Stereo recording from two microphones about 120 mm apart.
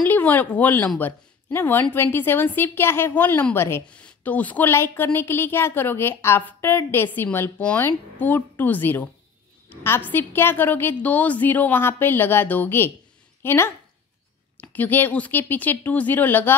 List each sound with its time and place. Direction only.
0.0 s a woman's voice: 15° left (ahead or behind)